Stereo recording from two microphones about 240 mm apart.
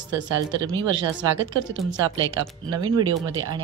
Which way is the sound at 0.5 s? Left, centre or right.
Centre.